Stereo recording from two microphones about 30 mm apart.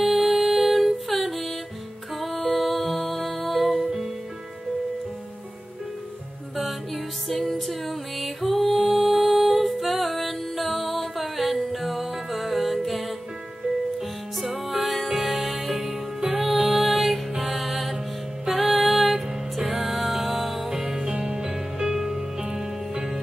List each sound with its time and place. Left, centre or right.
0.0 s music: centre
7.4 s music: centre
14.4 s music: centre
20.7 s music: centre
21.1 s music: right
21.4 s music: right